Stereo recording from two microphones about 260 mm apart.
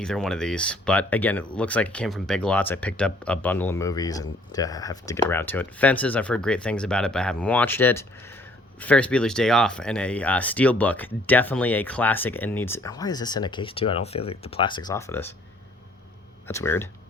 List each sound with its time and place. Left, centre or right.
0.0 s speech: centre
16.5 s speech: centre